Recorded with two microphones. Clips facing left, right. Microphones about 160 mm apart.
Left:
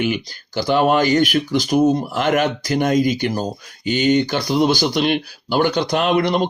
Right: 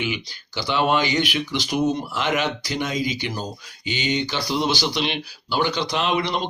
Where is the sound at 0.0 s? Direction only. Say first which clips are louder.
Left 7 dB; 45° left (ahead or behind).